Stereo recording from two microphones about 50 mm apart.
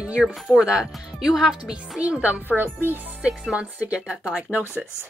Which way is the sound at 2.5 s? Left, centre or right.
Right.